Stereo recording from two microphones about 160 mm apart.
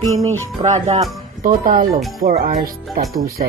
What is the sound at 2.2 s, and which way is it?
Speech, 70° right (ahead or behind).